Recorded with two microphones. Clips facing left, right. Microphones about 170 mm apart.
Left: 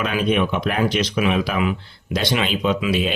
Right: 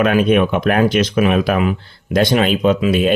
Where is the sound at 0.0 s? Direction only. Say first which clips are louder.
Right 7 dB; 55° right (ahead or behind).